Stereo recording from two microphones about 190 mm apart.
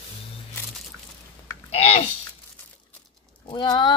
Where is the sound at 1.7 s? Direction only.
35° left (ahead or behind).